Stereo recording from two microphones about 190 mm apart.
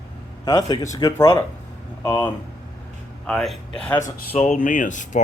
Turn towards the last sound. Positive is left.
turn(degrees=40)  # may be behind; listen again after turning